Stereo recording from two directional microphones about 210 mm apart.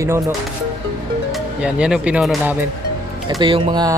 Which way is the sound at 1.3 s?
5° right (ahead or behind).